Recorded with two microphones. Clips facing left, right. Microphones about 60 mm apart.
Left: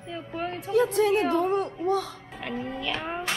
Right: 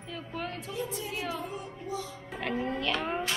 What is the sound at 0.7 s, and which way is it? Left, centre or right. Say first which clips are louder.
Speech: left 14 dB; left.